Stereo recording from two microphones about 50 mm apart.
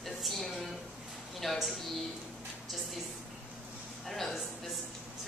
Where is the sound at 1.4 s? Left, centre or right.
Centre.